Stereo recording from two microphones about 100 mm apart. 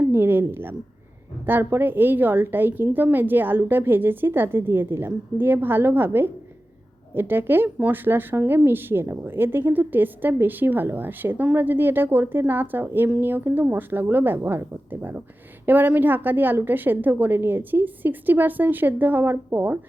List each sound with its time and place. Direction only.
0.0 s a woman's voice: 20° right (ahead or behind)